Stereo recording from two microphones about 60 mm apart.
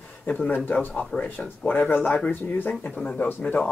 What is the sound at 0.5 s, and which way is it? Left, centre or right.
Speech, left.